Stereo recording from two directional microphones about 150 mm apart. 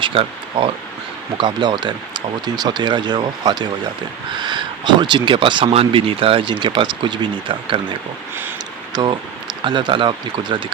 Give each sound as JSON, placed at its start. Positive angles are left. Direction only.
{"t": 0.0, "sound": "speech", "side_deg": -35}